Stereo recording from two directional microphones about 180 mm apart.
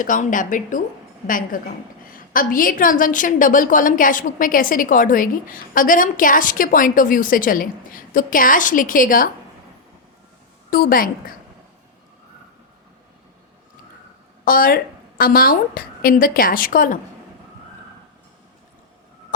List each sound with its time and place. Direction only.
0.0 s a woman's voice: 45° left (ahead or behind)
10.7 s a woman's voice: 55° left (ahead or behind)
14.4 s a woman's voice: 50° left (ahead or behind)